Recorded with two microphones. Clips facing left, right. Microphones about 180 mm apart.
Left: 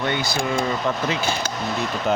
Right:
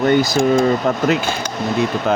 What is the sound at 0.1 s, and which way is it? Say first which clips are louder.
Speech: right 10 dB; 45° right (ahead or behind).